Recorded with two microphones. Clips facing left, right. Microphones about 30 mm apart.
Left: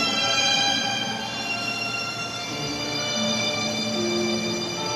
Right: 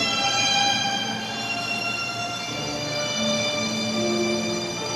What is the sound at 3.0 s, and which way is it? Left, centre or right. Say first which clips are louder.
Music: right 1 dB; centre.